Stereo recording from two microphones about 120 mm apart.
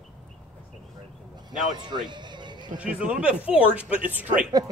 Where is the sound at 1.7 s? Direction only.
40° right (ahead or behind).